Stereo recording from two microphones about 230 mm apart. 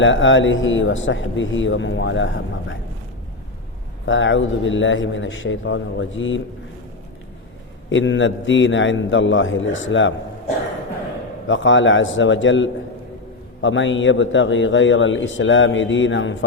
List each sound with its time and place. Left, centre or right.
0.0 s a man's voice: left
4.0 s a man's voice: left
7.9 s a man's voice: left
11.4 s a man's voice: left